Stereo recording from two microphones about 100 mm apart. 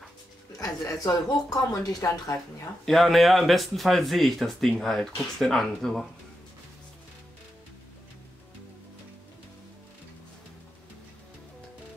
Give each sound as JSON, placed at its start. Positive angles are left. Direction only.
{"t": 0.6, "sound": "speech", "side_deg": 40}
{"t": 2.8, "sound": "speech", "side_deg": 5}